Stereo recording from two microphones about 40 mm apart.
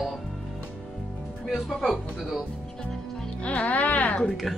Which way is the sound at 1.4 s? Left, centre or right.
Centre.